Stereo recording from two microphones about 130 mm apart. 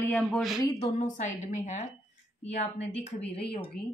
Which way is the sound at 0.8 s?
60° left (ahead or behind).